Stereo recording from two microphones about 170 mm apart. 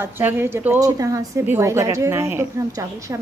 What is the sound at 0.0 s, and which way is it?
A woman's voice, 10° right (ahead or behind).